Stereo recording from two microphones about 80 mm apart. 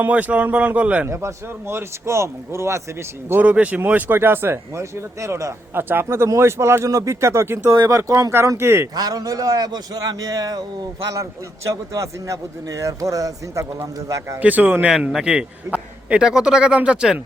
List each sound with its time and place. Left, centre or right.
0.0 s a man's voice: centre
1.0 s a man's voice: right
3.4 s a man's voice: centre; by 8.9 s right
9.0 s a man's voice: right
11.1 s a man's voice: right
14.4 s speech: right
15.1 s a man's voice: centre